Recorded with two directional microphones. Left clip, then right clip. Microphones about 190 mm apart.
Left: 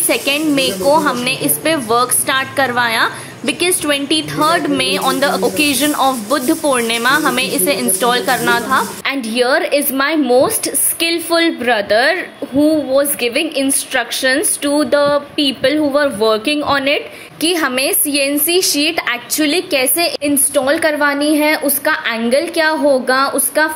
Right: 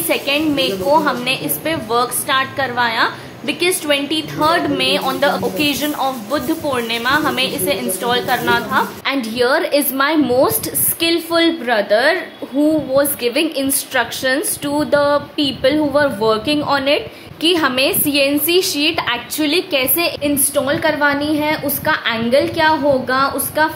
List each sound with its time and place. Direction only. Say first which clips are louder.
0.1 s a woman's voice: left 2 dB; 30° left (ahead or behind)